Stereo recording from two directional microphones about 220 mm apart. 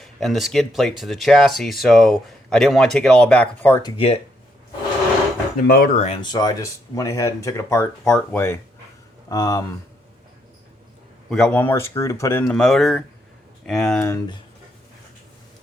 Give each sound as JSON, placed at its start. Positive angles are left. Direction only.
{"t": 0.0, "sound": "speech", "side_deg": 0}
{"t": 3.9, "sound": "speech", "side_deg": 25}
{"t": 5.6, "sound": "speech", "side_deg": 40}
{"t": 6.1, "sound": "speech", "side_deg": 20}
{"t": 11.3, "sound": "speech", "side_deg": 5}
{"t": 12.5, "sound": "speech", "side_deg": 0}